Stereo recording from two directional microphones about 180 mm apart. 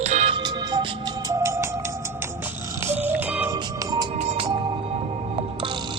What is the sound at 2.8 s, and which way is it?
Music, 10° right (ahead or behind).